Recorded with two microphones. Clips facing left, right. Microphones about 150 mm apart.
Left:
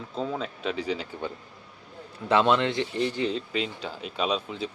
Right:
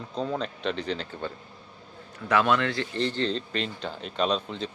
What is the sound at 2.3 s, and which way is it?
Speech, 20° left (ahead or behind).